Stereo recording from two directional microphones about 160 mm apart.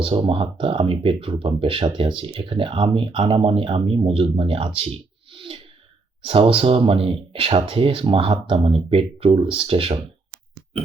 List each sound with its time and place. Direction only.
0.0 s speech: 35° right (ahead or behind)
5.3 s a sound: 35° right (ahead or behind)
6.2 s speech: 35° right (ahead or behind)